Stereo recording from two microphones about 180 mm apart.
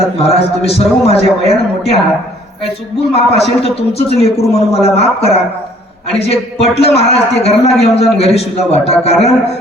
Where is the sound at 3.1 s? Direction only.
35° left (ahead or behind).